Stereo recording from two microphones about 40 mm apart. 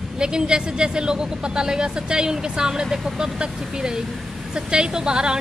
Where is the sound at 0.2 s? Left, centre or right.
Right.